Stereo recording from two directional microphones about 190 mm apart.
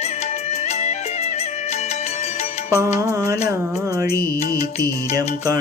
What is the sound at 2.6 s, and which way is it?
Music, 15° right (ahead or behind).